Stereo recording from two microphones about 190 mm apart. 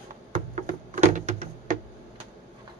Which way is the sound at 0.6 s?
40° right (ahead or behind).